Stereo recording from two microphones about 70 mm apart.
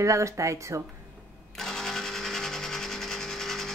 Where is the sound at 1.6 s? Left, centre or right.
Centre.